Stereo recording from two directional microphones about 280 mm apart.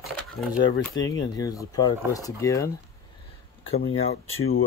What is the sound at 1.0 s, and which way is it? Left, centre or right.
Speech, left.